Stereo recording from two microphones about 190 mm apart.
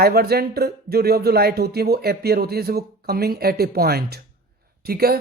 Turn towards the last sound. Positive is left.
turn(degrees=-55)  # may be behind; listen again after turning